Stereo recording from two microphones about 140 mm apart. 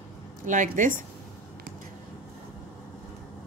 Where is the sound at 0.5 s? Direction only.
70° right (ahead or behind).